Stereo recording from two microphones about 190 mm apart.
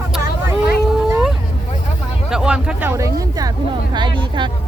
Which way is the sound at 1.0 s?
Centre (ahead or behind).